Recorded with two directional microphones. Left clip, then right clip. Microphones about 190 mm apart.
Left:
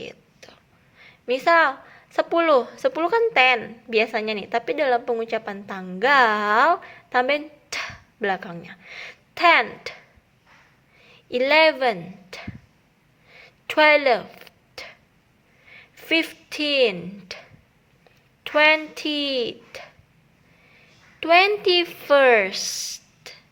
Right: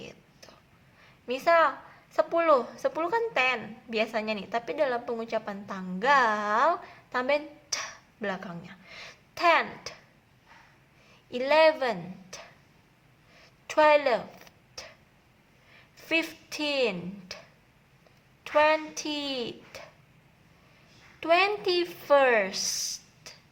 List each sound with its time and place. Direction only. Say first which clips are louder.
0.0 s a sound: left 8 dB; 15° left (ahead or behind)
1.0 s a woman's voice: left 6 dB; 15° left (ahead or behind)
11.3 s a woman's voice: left 5 dB; 20° left (ahead or behind)
13.7 s a sound: left 5 dB; 20° left (ahead or behind)
16.0 s a woman's voice: left 6 dB; 15° left (ahead or behind)
18.4 s speech: left 6 dB; 20° left (ahead or behind)
21.2 s a woman's voice: left 7 dB; 15° left (ahead or behind)